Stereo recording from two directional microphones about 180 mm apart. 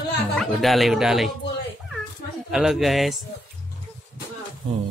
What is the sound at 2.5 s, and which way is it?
Speech, 5° right (ahead or behind).